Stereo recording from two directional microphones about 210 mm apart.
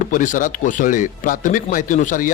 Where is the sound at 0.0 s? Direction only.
40° left (ahead or behind).